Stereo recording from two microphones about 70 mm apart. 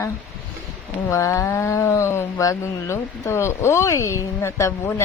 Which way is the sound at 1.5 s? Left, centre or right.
Left.